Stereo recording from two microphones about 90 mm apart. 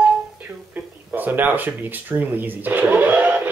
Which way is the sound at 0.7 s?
20° right (ahead or behind).